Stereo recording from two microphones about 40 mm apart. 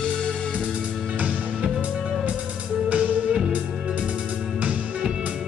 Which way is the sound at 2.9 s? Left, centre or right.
Right.